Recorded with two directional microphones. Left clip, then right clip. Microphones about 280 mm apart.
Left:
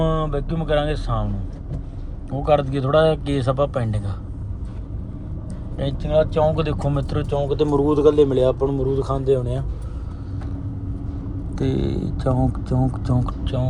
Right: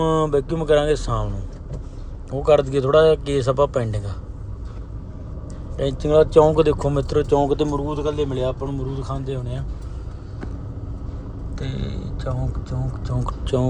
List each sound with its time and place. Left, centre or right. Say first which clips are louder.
0.0 s speech: right 4 dB; centre
2.3 s speech: right 2 dB; centre
5.5 s speech: right 4 dB; centre
7.8 s speech: left 8 dB; centre
11.5 s speech: left 9 dB; centre
13.4 s speech: right 5 dB; right